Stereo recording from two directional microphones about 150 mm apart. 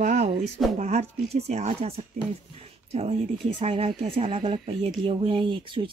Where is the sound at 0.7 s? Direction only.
50° right (ahead or behind).